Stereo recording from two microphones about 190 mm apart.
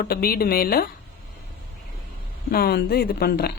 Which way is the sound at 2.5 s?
55° left (ahead or behind).